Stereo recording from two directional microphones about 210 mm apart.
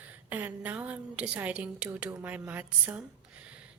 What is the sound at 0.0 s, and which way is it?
A woman's voice, 10° right (ahead or behind).